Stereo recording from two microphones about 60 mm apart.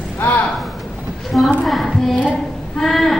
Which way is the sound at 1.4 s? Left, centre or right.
Centre.